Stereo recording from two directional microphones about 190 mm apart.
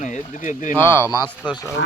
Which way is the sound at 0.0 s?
40° left (ahead or behind).